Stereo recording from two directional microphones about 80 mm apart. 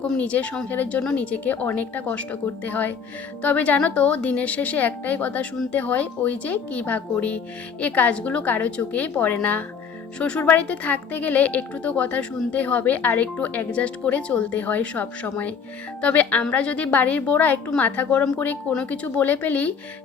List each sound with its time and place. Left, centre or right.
0.0 s speech: centre